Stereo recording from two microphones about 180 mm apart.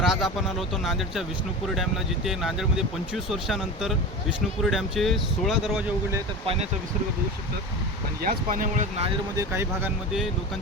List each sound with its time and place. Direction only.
0.0 s speech: centre (ahead or behind)
6.4 s speech: 30° right (ahead or behind)
8.2 s speech: 50° right (ahead or behind)
9.4 s speech: 15° right (ahead or behind)